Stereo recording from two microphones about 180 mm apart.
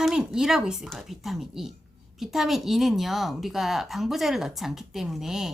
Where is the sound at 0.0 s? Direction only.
5° right (ahead or behind).